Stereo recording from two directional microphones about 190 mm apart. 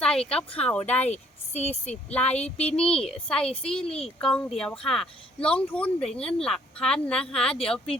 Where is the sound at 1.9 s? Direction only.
5° left (ahead or behind).